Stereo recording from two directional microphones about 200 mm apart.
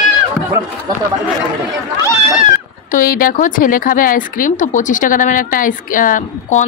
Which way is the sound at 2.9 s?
45° left (ahead or behind).